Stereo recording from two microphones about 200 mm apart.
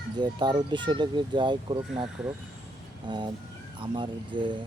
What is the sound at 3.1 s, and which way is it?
Speech, 25° right (ahead or behind).